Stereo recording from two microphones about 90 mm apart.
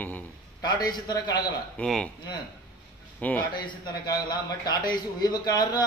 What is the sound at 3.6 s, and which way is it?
A man's voice, 50° left (ahead or behind).